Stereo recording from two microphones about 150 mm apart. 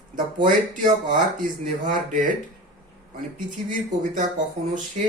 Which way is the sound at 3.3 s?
60° right (ahead or behind).